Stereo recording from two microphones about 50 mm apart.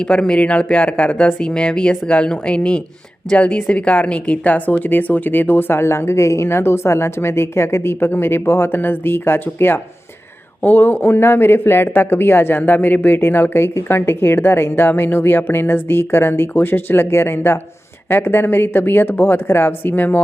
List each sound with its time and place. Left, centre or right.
0.0 s a woman's voice: centre; by 20.2 s left